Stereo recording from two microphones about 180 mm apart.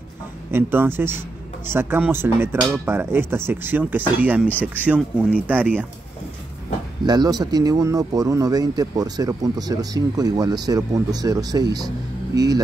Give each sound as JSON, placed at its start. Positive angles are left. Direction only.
{"t": 0.5, "sound": "speech", "side_deg": -10}
{"t": 7.1, "sound": "speech", "side_deg": -20}